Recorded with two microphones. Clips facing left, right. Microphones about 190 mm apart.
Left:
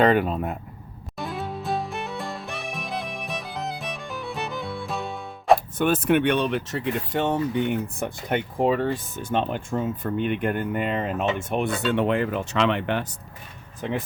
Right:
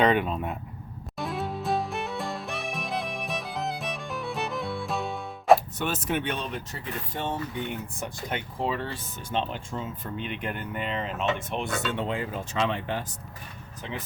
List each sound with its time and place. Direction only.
0.0 s speech: centre (ahead or behind)
1.2 s music: centre (ahead or behind)
5.7 s speech: 55° left (ahead or behind)